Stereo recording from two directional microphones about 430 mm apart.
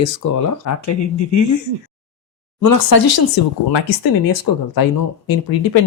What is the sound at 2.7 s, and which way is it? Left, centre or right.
Speech, left.